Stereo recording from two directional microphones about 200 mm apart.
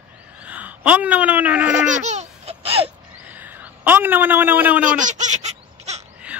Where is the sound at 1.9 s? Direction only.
35° right (ahead or behind).